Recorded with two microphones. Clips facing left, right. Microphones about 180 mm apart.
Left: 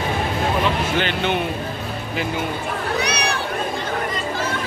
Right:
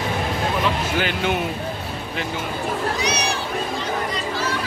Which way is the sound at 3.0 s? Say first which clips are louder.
Left 1 dB; 60° left (ahead or behind).